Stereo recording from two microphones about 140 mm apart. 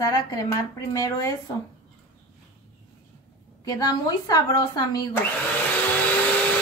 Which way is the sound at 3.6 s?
30° left (ahead or behind).